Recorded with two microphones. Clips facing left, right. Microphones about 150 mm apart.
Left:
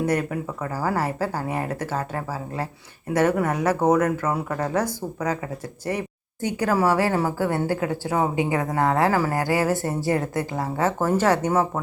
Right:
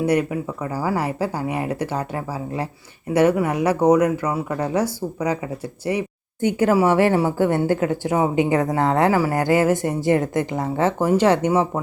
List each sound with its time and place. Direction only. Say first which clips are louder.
0.0 s speech: right 4 dB; 10° right (ahead or behind)
6.4 s speech: right 4 dB; 25° right (ahead or behind)